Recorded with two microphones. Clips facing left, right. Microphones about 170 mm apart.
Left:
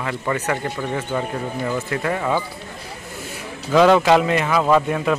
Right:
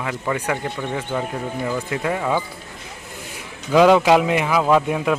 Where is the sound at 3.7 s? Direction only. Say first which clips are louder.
Even; 10° right (ahead or behind).